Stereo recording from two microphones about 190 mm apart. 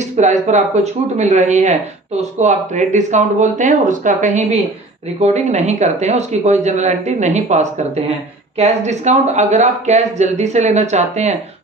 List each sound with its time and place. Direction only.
0.2 s speech: 40° right (ahead or behind)